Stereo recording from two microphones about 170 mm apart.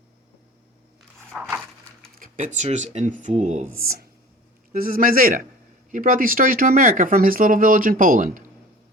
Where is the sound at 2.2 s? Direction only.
45° right (ahead or behind).